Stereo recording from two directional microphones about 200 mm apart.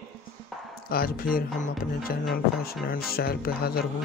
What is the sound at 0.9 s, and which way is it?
Speech, 45° left (ahead or behind).